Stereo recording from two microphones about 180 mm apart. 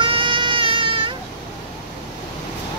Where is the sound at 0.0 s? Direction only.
30° right (ahead or behind).